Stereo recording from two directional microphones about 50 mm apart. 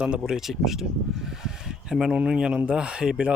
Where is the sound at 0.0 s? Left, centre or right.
Centre.